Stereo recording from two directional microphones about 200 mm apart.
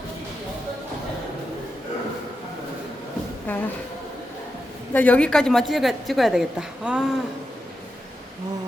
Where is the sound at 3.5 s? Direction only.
10° left (ahead or behind).